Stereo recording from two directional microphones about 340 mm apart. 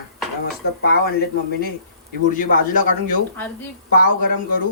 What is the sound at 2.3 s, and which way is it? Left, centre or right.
A man's voice, left.